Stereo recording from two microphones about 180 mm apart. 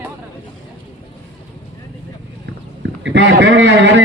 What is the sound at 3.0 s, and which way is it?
A man's voice, 80° right.